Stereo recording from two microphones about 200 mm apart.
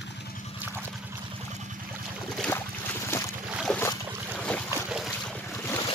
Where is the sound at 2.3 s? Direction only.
5° left (ahead or behind).